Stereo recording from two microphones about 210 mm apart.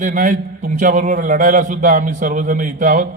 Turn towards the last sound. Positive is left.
turn(degrees=-40)  # may be behind; listen again after turning